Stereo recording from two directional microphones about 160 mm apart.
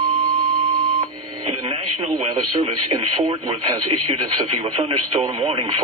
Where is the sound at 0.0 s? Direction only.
60° right (ahead or behind).